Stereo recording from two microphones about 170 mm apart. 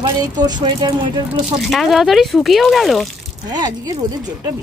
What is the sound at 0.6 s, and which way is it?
Speech, 25° right (ahead or behind).